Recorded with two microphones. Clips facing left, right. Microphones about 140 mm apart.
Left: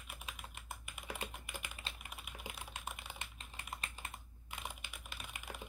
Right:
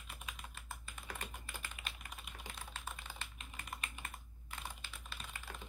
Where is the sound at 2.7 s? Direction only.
15° left (ahead or behind).